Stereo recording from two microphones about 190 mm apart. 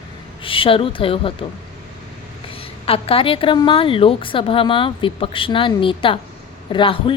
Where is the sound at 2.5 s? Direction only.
30° left (ahead or behind).